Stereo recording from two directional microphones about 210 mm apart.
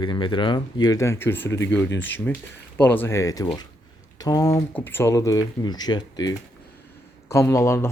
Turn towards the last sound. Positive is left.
turn(degrees=15)  # may be behind; listen again after turning